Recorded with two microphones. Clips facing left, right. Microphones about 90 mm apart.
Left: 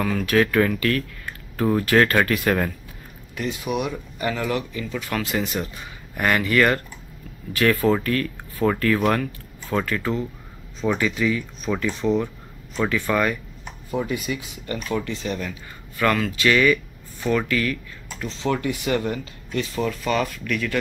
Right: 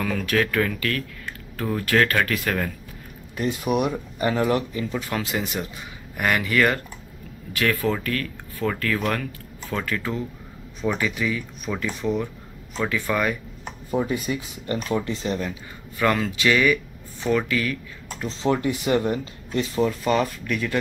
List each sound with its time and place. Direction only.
0.0 s speech: 5° left (ahead or behind)
3.4 s speech: 45° right (ahead or behind)
3.9 s speech: 30° right (ahead or behind)
5.1 s speech: 15° right (ahead or behind)
6.1 s speech: 5° right (ahead or behind)
12.7 s speech: 5° left (ahead or behind)
13.8 s speech: 25° right (ahead or behind)
16.4 s speech: 10° right (ahead or behind)
18.4 s speech: 30° right (ahead or behind)